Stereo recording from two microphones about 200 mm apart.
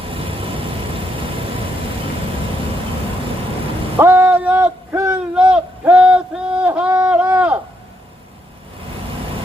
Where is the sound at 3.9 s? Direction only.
10° right (ahead or behind).